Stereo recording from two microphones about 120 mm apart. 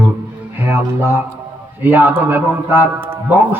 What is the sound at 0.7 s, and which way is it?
A man's voice, 20° right (ahead or behind).